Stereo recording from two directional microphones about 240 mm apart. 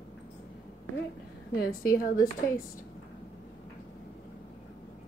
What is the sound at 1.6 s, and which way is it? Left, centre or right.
Speech, left.